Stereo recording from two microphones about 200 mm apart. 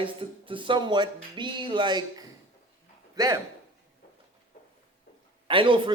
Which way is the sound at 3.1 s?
15° right (ahead or behind).